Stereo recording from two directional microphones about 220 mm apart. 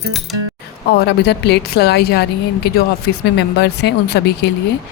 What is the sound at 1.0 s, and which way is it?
Speech, 50° left (ahead or behind).